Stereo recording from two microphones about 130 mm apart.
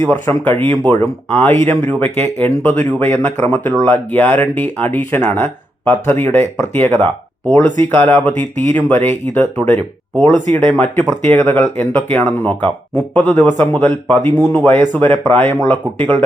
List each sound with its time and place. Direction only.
0.0 s speech: 15° left (ahead or behind)